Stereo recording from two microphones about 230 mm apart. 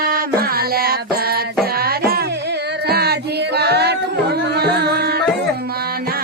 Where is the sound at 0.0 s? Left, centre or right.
Right.